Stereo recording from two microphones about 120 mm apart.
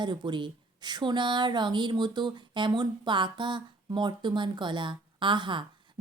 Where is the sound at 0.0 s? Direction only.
40° right (ahead or behind).